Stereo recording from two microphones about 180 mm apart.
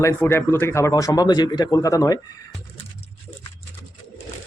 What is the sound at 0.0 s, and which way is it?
Speech, 15° left (ahead or behind).